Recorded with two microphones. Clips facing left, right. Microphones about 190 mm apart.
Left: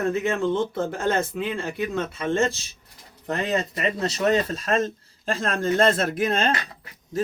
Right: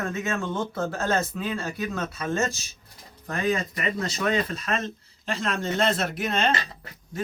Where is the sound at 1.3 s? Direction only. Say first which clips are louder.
Left 3 dB; 15° left (ahead or behind).